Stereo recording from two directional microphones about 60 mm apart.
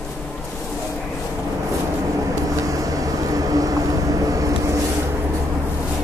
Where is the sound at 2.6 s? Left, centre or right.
Right.